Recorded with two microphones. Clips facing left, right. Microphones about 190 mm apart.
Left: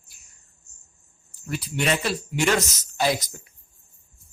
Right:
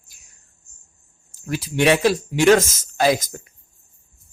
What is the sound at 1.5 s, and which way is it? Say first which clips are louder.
Speech: right 7 dB; 90° right.